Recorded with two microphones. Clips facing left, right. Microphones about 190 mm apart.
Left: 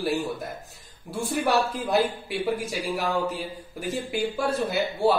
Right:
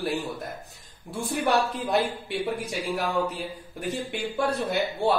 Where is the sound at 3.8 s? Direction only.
Centre (ahead or behind).